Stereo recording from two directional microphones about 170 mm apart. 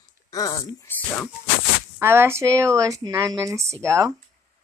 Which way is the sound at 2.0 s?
15° right (ahead or behind).